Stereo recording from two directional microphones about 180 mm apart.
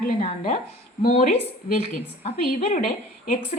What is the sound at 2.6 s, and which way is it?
Speech, 45° left (ahead or behind).